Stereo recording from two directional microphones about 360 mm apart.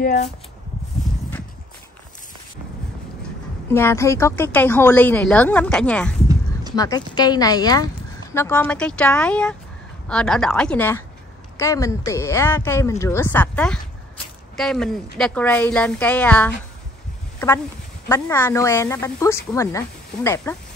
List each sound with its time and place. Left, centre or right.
0.0 s speech: centre
3.7 s a woman's voice: centre
18.0 s speech: centre